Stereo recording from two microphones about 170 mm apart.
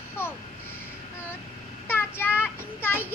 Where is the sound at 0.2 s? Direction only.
15° left (ahead or behind).